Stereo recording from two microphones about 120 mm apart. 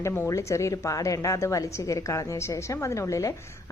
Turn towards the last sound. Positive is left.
turn(degrees=25)  # may be behind; listen again after turning